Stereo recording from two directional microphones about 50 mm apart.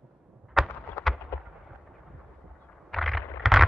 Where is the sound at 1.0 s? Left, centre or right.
Left.